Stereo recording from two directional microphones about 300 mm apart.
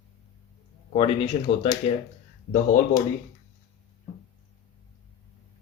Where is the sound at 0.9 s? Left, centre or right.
Centre.